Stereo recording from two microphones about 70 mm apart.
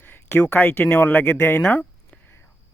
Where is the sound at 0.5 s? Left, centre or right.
Left.